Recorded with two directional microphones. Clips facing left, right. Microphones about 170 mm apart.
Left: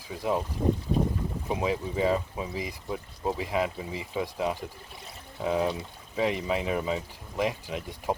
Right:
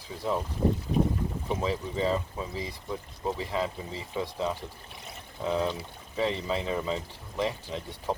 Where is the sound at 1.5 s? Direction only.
15° left (ahead or behind).